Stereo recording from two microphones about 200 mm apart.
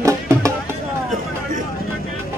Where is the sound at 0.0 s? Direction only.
15° right (ahead or behind).